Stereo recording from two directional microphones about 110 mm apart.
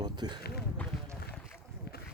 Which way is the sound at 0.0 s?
40° right (ahead or behind).